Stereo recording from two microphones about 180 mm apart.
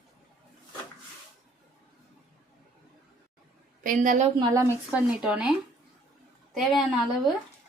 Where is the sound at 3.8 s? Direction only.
50° right (ahead or behind).